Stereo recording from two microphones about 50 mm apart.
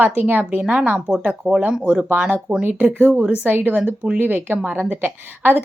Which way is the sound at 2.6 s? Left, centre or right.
Right.